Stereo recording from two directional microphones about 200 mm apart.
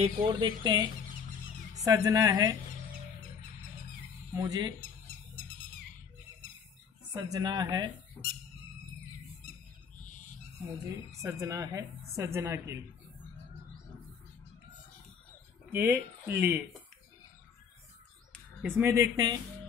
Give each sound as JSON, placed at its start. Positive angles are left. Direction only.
{"t": 0.0, "sound": "speech", "side_deg": -25}
{"t": 1.9, "sound": "a woman's voice", "side_deg": -15}
{"t": 4.4, "sound": "speech", "side_deg": -20}
{"t": 7.1, "sound": "speech", "side_deg": -15}
{"t": 11.1, "sound": "a woman's voice", "side_deg": -15}
{"t": 15.7, "sound": "a woman's voice", "side_deg": -10}
{"t": 18.8, "sound": "a woman's voice", "side_deg": -15}